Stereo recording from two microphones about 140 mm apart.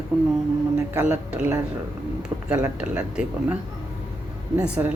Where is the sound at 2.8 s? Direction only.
10° right (ahead or behind).